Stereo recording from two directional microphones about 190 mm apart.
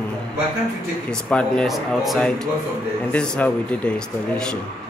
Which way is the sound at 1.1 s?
5° left (ahead or behind).